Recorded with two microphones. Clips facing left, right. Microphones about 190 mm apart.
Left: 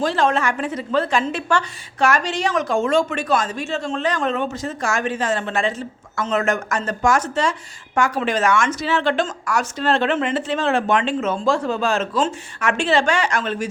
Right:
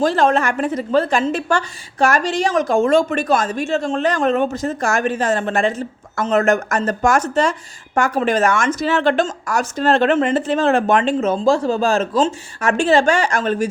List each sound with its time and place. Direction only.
0.0 s a woman's voice: 45° right (ahead or behind)